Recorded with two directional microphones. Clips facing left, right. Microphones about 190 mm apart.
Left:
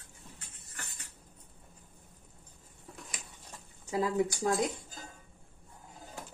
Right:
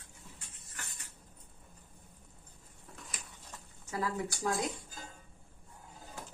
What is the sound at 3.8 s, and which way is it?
Speech, 20° left (ahead or behind).